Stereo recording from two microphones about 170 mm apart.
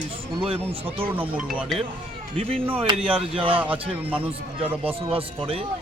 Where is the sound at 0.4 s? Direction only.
30° right (ahead or behind).